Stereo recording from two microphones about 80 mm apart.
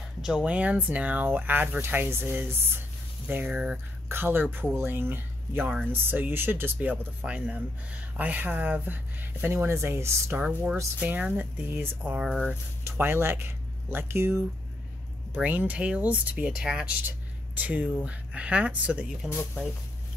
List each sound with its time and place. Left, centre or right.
0.2 s speech: centre
0.5 s speech: centre; by 10.3 s right
10.3 s speech: right
12.8 s speech: right
15.3 s speech: right
17.6 s speech: right